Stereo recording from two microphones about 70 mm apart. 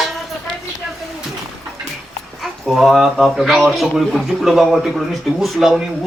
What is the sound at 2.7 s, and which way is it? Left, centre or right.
A man's voice, centre.